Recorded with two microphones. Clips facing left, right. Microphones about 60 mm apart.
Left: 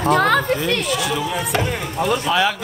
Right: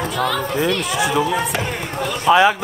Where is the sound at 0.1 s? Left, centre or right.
Left.